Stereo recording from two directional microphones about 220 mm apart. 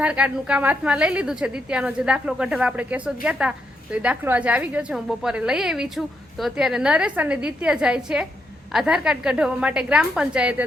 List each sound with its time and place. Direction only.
0.0 s a woman's voice: 5° right (ahead or behind)